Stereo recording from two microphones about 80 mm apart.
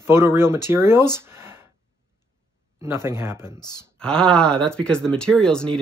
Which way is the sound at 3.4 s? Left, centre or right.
Left.